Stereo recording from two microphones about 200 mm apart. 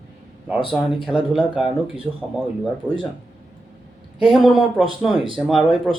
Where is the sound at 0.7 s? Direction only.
5° right (ahead or behind).